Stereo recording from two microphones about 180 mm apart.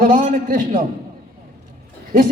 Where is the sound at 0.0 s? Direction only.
50° right (ahead or behind).